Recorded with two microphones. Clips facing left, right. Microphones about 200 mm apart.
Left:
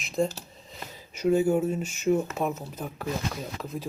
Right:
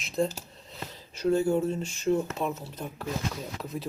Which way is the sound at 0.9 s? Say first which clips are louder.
Left 2 dB; 10° left (ahead or behind).